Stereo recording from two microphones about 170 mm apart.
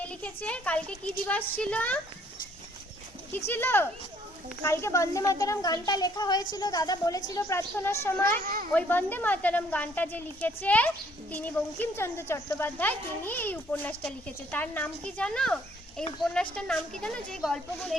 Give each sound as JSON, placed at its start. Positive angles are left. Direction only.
{"t": 0.0, "sound": "a woman's voice", "side_deg": 10}
{"t": 3.3, "sound": "a woman's voice", "side_deg": 10}
{"t": 8.4, "sound": "speech", "side_deg": -55}
{"t": 8.7, "sound": "a woman's voice", "side_deg": 10}